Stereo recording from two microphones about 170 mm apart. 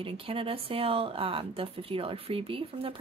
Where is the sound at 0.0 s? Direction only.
35° right (ahead or behind).